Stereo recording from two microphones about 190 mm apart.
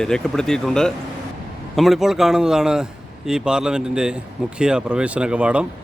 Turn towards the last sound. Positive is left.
turn(degrees=-5)  # may be behind; listen again after turning